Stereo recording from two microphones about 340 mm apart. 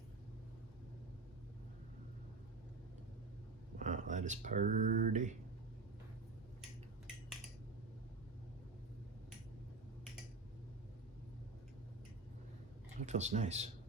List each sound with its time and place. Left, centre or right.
3.8 s speech: right
13.1 s speech: centre